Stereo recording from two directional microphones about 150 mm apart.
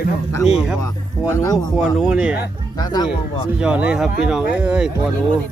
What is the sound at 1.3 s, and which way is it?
Speech, 20° left (ahead or behind).